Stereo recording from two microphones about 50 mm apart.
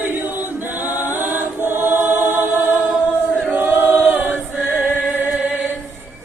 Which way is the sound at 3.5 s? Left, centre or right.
Right.